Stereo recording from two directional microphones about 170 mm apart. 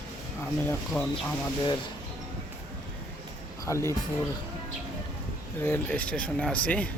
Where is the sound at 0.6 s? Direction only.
10° left (ahead or behind).